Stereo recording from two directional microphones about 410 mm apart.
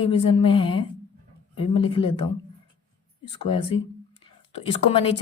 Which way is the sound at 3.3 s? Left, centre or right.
Centre.